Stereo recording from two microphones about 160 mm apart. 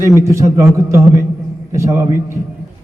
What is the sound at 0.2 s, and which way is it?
A man's voice, 20° right (ahead or behind).